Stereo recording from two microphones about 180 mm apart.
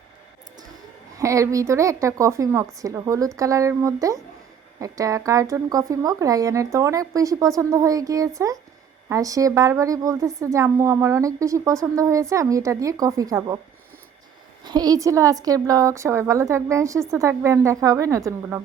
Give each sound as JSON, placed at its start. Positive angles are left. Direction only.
{"t": 1.2, "sound": "a woman's voice", "side_deg": -15}
{"t": 14.6, "sound": "a woman's voice", "side_deg": -20}